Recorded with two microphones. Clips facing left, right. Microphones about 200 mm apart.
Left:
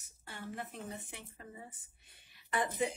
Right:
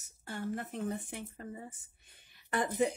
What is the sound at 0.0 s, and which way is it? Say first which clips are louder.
Speech: right 8 dB; 45° right (ahead or behind).